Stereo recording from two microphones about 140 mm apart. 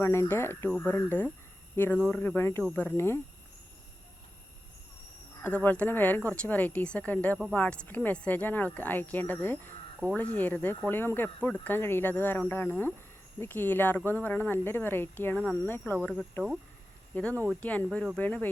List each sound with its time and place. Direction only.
0.0 s speech: 20° left (ahead or behind)
5.4 s speech: 10° left (ahead or behind)
17.2 s speech: 10° left (ahead or behind)